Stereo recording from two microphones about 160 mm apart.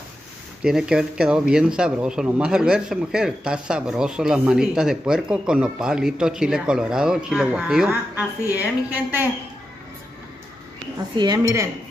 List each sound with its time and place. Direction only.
0.7 s speech: 5° right (ahead or behind)
11.1 s speech: 25° right (ahead or behind)